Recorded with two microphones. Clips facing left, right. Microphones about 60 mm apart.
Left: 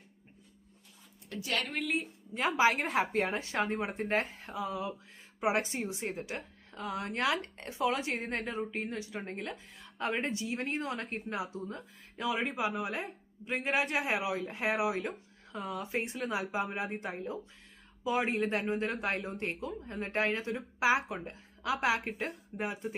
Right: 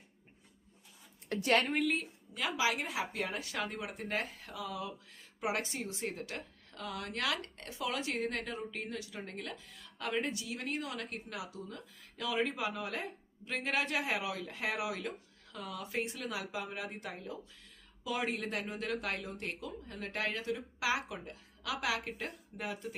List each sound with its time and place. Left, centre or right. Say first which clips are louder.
1.3 s a woman's voice: right 6 dB; right
1.7 s a woman's voice: right 2 dB; centre
2.3 s a woman's voice: left 6 dB; left